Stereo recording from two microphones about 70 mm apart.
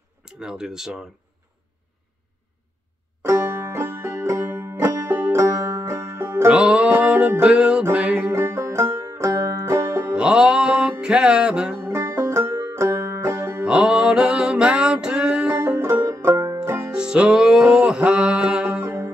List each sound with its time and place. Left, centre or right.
0.2 s speech: centre
3.3 s music: right
6.5 s music: centre
7.5 s music: centre
7.9 s music: right
8.3 s music: right
10.1 s music: centre
11.8 s music: right
13.7 s music: centre
15.6 s music: right
16.9 s music: centre